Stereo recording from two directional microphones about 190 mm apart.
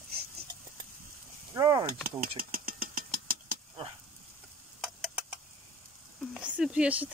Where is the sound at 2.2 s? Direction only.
50° right (ahead or behind).